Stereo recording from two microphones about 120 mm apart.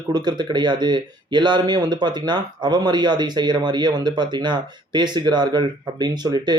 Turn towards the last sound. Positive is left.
turn(degrees=-35)  # may be behind; listen again after turning